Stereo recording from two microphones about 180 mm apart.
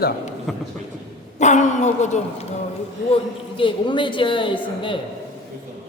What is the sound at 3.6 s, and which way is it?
A woman's voice, 25° left (ahead or behind).